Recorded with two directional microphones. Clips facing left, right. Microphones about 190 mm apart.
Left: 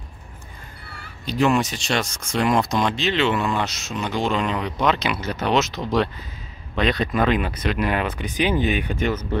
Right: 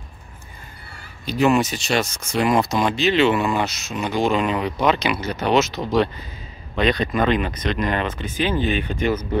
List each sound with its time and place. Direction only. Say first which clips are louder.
1.2 s speech: right 2 dB; 5° right (ahead or behind); by 8.8 s 15° left (ahead or behind)